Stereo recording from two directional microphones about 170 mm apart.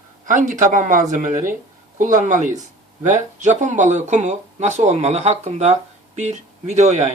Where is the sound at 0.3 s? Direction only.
50° right (ahead or behind).